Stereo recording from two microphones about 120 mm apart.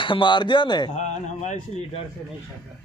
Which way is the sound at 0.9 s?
80° left.